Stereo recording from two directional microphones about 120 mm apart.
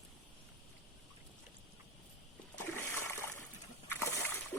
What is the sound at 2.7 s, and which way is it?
Splash, 20° left (ahead or behind).